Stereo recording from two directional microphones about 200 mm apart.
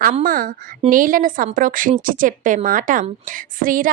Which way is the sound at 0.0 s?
45° right (ahead or behind).